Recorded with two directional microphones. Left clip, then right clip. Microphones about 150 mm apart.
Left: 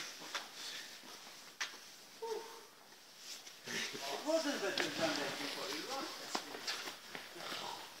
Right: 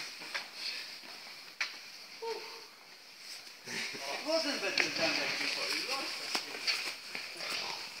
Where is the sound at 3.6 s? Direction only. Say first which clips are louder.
Right 2 dB; 35° right (ahead or behind).